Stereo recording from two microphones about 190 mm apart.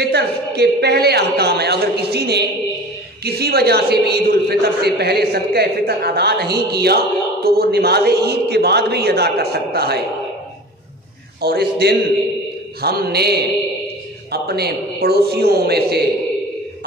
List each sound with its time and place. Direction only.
0.0 s a man's voice: 60° right (ahead or behind)
11.4 s a man's voice: 55° right (ahead or behind)